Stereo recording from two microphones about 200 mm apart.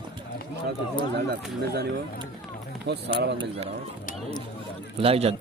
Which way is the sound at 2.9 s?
60° right (ahead or behind).